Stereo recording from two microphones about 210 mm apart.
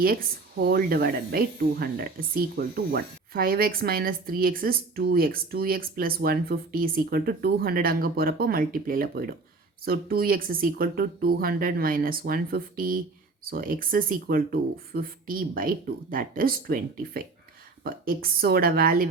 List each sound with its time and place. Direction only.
0.6 s speech: 45° right (ahead or behind)